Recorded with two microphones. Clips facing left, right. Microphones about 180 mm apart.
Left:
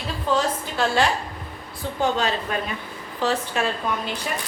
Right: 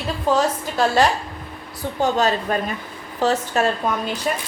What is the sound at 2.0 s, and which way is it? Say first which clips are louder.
A woman's voice: right 4 dB; 40° right (ahead or behind).